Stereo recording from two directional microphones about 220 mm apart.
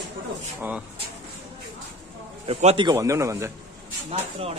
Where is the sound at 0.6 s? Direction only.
5° right (ahead or behind).